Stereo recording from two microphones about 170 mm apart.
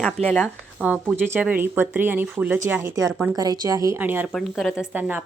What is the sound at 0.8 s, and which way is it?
A woman's voice, 5° right (ahead or behind).